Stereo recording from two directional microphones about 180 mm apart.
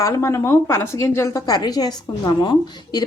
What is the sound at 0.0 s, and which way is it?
A woman's voice, 15° left (ahead or behind).